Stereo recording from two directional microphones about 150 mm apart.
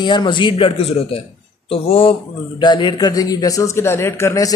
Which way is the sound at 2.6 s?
30° left (ahead or behind).